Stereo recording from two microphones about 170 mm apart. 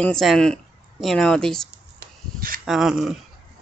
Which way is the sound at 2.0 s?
55° right (ahead or behind).